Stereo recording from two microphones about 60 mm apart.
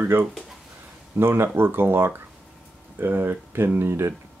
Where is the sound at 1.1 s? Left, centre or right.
Right.